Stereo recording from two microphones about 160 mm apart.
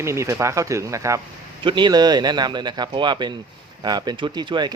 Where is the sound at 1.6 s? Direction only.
30° right (ahead or behind).